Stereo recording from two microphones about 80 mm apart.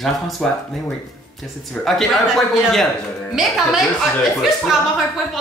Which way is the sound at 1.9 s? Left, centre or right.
Centre.